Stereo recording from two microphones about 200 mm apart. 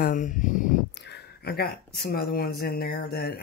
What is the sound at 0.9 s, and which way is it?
Speech, 55° left (ahead or behind).